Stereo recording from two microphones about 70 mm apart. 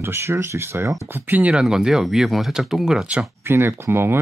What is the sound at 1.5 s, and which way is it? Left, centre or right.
Speech, centre.